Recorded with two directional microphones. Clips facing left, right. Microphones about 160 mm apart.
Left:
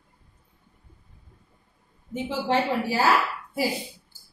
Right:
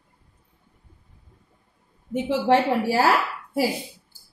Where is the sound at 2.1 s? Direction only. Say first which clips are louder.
Right 5 dB; 70° right (ahead or behind).